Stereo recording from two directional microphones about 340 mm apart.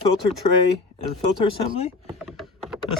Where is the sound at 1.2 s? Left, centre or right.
Centre.